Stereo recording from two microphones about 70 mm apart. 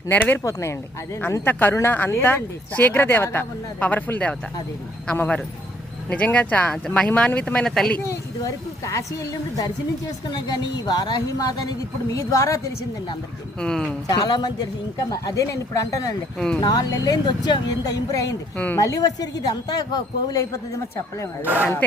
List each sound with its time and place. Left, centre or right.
0.1 s speech: left
0.4 s a woman's voice: left
1.5 s speech: left; by 7.1 s centre
7.1 s speech: left
8.8 s a woman's voice: left
10.2 s a woman's voice: left
12.1 s a woman's voice: left
13.6 s speech: centre
14.1 s speech: left
16.6 s speech: left
18.5 s speech: left
18.8 s speech: left
21.4 s speech: right